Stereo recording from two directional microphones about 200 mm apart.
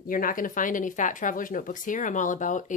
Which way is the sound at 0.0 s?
45° left (ahead or behind).